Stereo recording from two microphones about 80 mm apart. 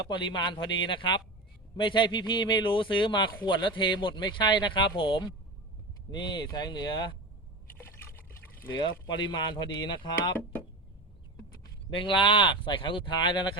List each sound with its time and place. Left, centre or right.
0.1 s speech: left
3.4 s speech: left
6.1 s speech: left
7.7 s liquid: left
8.7 s speech: left
11.9 s speech: left